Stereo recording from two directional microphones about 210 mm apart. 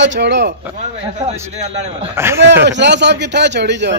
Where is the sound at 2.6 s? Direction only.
55° right (ahead or behind).